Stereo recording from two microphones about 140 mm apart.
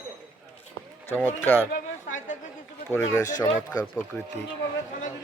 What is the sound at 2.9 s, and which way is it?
Speech, 15° left (ahead or behind).